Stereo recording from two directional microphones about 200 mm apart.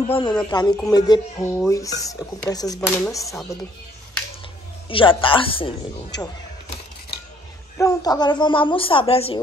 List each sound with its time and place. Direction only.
0.1 s speech: 20° left (ahead or behind)
4.8 s speech: 25° left (ahead or behind)
6.1 s a sound: 20° left (ahead or behind)
7.7 s speech: 15° left (ahead or behind)